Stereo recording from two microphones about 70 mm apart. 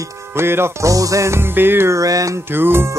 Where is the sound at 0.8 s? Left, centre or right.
Right.